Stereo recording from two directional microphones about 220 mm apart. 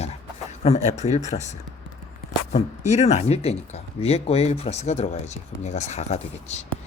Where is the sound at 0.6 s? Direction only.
30° left (ahead or behind).